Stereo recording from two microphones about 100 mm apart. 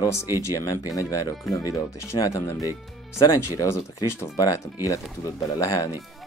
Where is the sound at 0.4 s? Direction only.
35° left (ahead or behind).